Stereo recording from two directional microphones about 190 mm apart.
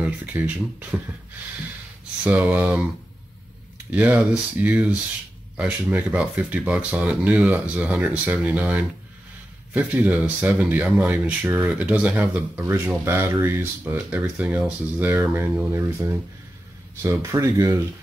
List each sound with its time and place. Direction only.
0.0 s speech: 10° right (ahead or behind)
2.2 s speech: 10° right (ahead or behind)
17.0 s speech: 15° right (ahead or behind)